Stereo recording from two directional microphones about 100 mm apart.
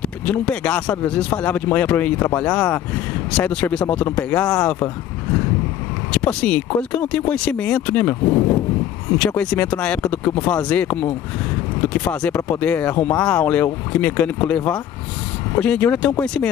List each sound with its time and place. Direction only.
0.0 s speech: 10° left (ahead or behind)
6.1 s speech: 10° left (ahead or behind)